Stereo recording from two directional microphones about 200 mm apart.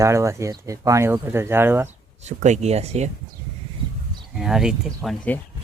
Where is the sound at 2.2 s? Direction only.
35° right (ahead or behind).